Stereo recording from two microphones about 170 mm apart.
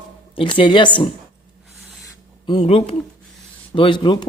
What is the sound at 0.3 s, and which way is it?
Speech, 30° left (ahead or behind).